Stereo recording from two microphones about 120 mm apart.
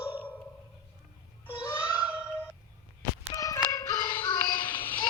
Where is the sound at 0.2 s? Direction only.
15° left (ahead or behind).